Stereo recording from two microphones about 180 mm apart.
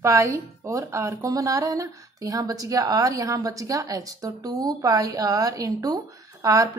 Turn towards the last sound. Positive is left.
turn(degrees=-20)  # may be behind; listen again after turning